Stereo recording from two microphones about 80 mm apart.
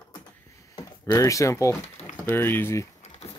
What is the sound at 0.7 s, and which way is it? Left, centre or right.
Speech, left.